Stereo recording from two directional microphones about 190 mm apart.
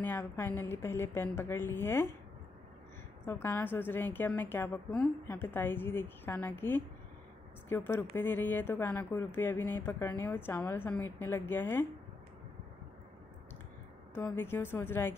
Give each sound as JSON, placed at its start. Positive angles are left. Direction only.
{"t": 0.0, "sound": "speech", "side_deg": 10}
{"t": 3.3, "sound": "speech", "side_deg": 10}
{"t": 14.1, "sound": "speech", "side_deg": 10}